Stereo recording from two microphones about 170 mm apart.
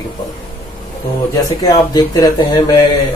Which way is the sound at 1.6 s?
25° left (ahead or behind).